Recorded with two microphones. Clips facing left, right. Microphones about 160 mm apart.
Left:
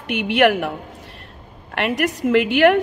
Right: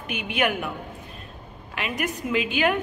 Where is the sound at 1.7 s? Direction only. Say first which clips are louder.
Left 8 dB; 70° left (ahead or behind).